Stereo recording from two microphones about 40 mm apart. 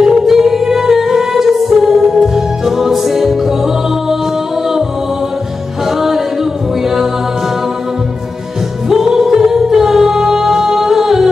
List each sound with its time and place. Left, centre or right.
0.0 s music: centre
5.9 s music: centre
8.8 s music: centre